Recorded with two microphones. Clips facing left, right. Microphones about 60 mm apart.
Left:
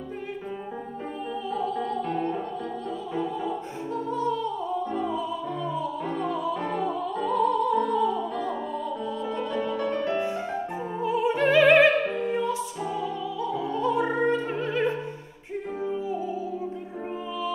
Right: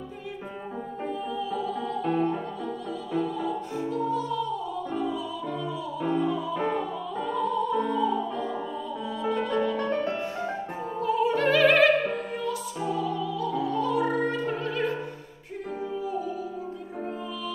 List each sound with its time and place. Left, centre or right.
4.1 s music: left
6.5 s music: centre
7.3 s opera: left
11.0 s opera: centre